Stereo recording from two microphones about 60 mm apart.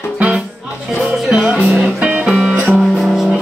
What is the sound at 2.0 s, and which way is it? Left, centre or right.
Music, centre.